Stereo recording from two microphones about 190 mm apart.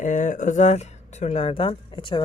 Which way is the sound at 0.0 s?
40° left (ahead or behind).